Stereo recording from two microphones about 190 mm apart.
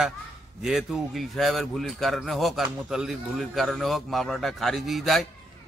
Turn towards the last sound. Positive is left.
turn(degrees=0)  # may be behind; listen again after turning